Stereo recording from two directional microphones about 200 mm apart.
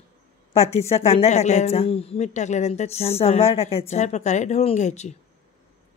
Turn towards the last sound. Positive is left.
turn(degrees=35)  # may be behind; listen again after turning